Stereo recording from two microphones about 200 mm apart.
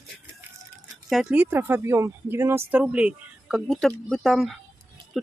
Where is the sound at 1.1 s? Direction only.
5° right (ahead or behind).